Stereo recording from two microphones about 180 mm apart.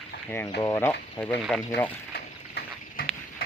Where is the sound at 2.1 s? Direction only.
60° left (ahead or behind).